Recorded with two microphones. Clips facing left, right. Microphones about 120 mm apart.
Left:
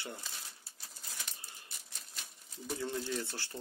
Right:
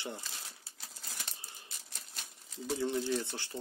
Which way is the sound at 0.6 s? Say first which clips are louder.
Right 2 dB; 90° right.